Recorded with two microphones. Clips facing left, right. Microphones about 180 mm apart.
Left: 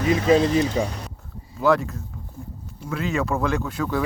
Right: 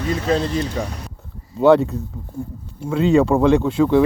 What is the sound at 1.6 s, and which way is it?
Speech, 25° right (ahead or behind).